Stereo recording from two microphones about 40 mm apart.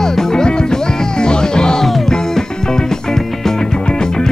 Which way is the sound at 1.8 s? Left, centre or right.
Centre.